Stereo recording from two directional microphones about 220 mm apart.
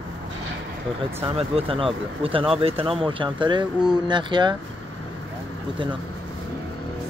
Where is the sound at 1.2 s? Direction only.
25° right (ahead or behind).